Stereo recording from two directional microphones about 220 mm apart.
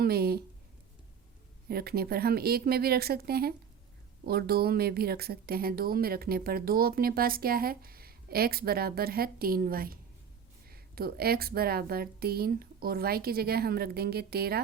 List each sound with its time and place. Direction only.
0.0 s speech: 45° right (ahead or behind)
1.6 s speech: 45° right (ahead or behind)